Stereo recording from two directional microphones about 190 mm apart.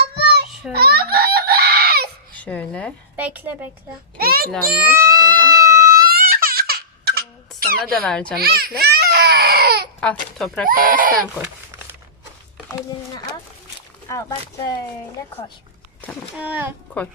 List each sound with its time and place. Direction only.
0.7 s baby cry: 55° right (ahead or behind)
2.3 s speech: 5° left (ahead or behind)
3.2 s a woman's voice: 10° right (ahead or behind)
4.2 s a sound: 50° right (ahead or behind)
4.7 s baby cry: 10° right (ahead or behind)
5.9 s laughter: 50° right (ahead or behind)
7.9 s speech: 5° left (ahead or behind)
8.4 s speech: 55° right (ahead or behind)
10.0 s speech: 5° left (ahead or behind)
10.7 s speech: 50° right (ahead or behind)
14.1 s speech: 20° left (ahead or behind)
16.4 s a woman's voice: 10° right (ahead or behind)